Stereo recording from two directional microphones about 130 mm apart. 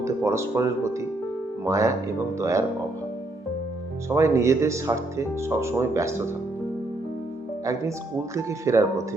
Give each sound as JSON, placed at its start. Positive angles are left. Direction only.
{"t": 0.0, "sound": "speech", "side_deg": -20}
{"t": 4.1, "sound": "speech", "side_deg": -20}
{"t": 7.6, "sound": "speech", "side_deg": -25}